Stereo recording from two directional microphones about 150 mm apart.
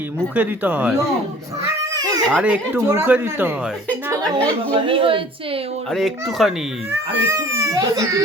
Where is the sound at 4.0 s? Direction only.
20° right (ahead or behind); by 5.8 s 40° right (ahead or behind).